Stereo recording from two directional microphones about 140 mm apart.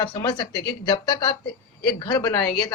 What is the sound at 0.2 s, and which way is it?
A man's voice, 30° left (ahead or behind).